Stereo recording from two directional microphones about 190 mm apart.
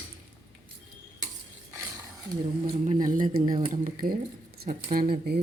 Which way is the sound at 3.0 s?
45° right (ahead or behind).